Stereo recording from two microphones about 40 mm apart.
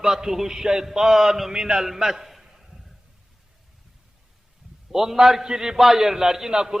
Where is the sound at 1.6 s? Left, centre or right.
Centre.